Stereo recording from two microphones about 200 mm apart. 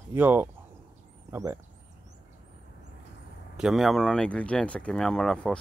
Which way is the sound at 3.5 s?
Centre (ahead or behind).